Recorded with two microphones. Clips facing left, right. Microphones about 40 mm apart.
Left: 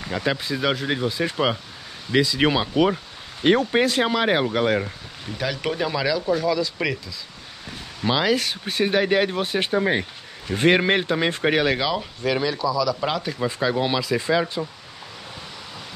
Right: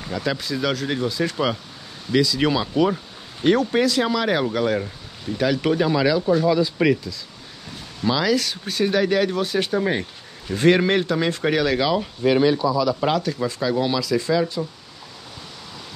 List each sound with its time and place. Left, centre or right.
0.1 s speech: left
5.4 s speech: centre
8.0 s speech: left
11.8 s speech: centre
12.3 s speech: centre
13.2 s speech: centre